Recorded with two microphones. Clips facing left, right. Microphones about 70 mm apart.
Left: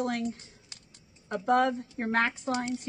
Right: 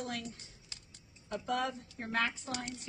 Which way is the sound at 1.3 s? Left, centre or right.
Left.